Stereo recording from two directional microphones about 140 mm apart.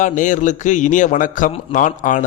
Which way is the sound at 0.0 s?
65° left (ahead or behind).